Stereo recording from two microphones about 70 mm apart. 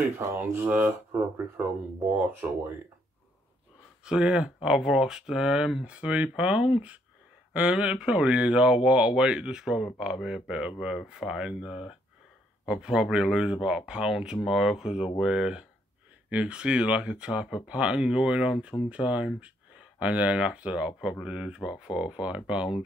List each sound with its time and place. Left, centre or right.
0.2 s speech: right
0.7 s speech: right
4.0 s speech: centre